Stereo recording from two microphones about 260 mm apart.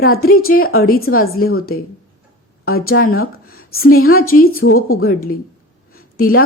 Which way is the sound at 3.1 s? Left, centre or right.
Left.